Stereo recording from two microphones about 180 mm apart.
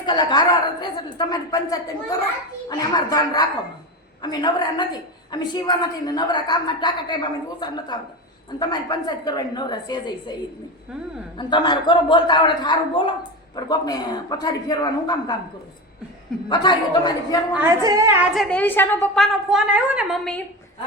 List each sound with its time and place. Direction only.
0.0 s a woman's voice: 25° left (ahead or behind)
11.3 s a woman's voice: 25° left (ahead or behind)
16.5 s a woman's voice: 25° left (ahead or behind)
17.6 s a woman's voice: 15° right (ahead or behind)
18.3 s a woman's voice: 5° left (ahead or behind)